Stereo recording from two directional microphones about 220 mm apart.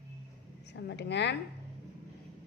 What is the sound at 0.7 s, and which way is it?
Speech, 50° left (ahead or behind).